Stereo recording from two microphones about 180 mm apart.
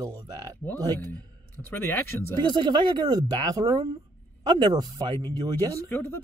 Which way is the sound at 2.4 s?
25° right (ahead or behind).